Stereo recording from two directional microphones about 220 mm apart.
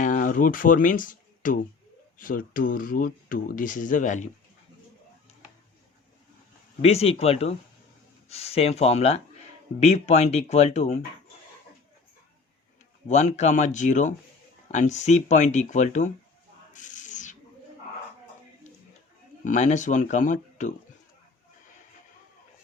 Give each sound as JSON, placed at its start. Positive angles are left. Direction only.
{"t": 0.0, "sound": "speech", "side_deg": 35}
{"t": 6.8, "sound": "speech", "side_deg": 25}
{"t": 13.1, "sound": "speech", "side_deg": 30}
{"t": 16.7, "sound": "owl", "side_deg": 35}
{"t": 19.5, "sound": "speech", "side_deg": 35}